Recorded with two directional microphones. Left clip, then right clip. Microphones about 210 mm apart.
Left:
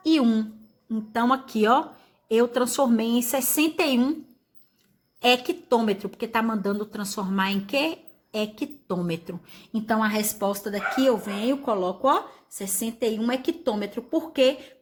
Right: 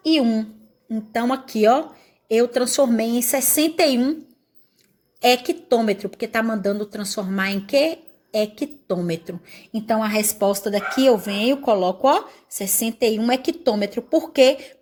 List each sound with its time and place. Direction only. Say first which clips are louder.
0.0 s a woman's voice: right 3 dB; 10° right (ahead or behind)
5.2 s a woman's voice: right 4 dB; 20° right (ahead or behind)